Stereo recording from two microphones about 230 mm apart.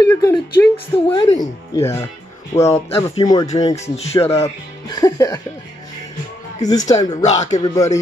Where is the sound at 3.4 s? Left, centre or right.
Left.